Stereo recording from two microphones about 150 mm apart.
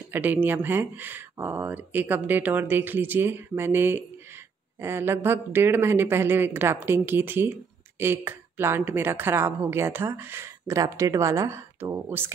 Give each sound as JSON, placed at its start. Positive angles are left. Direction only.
{"t": 0.1, "sound": "speech", "side_deg": -10}